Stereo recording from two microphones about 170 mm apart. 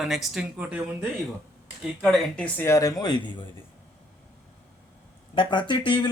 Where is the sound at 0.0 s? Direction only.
Centre (ahead or behind).